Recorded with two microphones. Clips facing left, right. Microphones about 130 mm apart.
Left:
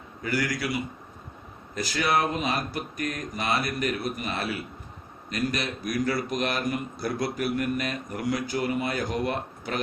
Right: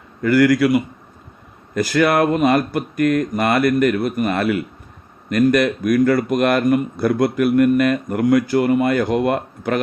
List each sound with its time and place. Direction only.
0.2 s speech: 55° right (ahead or behind)